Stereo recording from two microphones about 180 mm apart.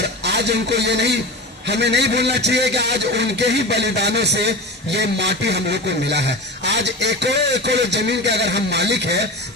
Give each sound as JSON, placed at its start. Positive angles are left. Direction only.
{"t": 0.2, "sound": "a man's voice", "side_deg": -70}